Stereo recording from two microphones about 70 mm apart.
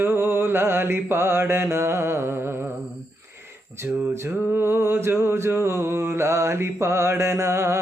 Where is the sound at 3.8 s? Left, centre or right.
Right.